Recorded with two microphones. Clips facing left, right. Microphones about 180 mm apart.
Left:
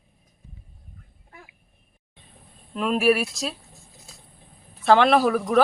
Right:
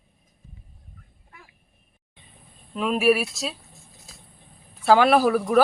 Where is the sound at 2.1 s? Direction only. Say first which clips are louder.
Left 1 dB; centre (ahead or behind).